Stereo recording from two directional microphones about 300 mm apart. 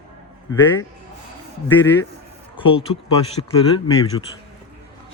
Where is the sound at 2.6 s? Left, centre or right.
Centre.